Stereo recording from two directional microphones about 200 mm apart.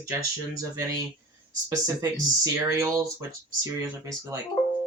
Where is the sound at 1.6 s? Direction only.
15° right (ahead or behind).